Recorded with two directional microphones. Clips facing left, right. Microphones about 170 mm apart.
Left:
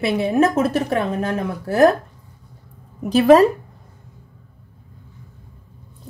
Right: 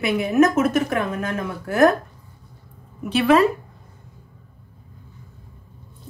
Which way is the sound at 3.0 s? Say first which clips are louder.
Left 5 dB; 40° left (ahead or behind).